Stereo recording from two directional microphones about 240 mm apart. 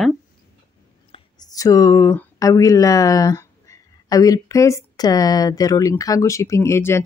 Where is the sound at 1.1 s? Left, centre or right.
Centre.